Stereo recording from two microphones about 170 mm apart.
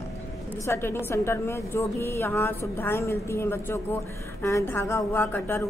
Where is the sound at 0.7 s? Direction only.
15° left (ahead or behind).